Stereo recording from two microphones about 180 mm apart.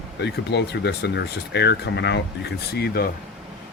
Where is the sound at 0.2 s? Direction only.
70° left (ahead or behind).